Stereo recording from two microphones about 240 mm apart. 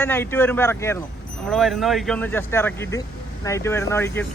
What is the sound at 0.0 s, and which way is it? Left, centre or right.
Speech, centre.